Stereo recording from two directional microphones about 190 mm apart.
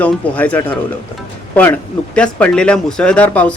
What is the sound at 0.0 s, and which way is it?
Speech, 10° left (ahead or behind).